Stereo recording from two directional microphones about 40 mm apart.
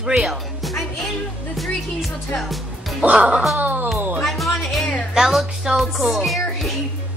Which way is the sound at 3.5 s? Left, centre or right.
Right.